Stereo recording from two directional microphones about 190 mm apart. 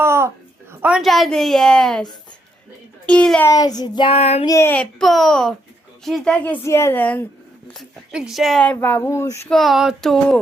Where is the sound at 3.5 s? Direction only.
20° left (ahead or behind).